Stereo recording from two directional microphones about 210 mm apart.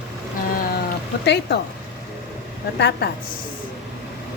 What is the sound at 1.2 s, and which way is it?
Speech, 50° left (ahead or behind).